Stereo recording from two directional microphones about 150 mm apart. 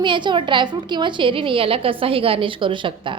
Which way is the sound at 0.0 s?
30° right (ahead or behind).